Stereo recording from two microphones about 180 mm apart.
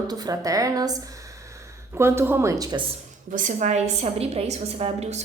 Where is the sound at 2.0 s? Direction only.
15° right (ahead or behind).